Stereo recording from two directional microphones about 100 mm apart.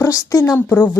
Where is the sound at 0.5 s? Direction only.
20° left (ahead or behind).